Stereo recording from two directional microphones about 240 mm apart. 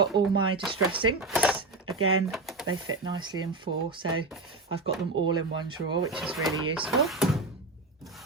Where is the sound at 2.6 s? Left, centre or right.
Right.